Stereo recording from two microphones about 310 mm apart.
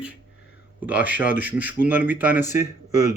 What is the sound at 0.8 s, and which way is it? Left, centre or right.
Speech, centre.